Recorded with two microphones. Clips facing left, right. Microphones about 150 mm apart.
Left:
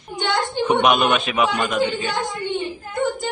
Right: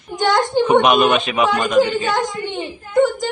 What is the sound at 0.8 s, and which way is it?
Speech, centre (ahead or behind).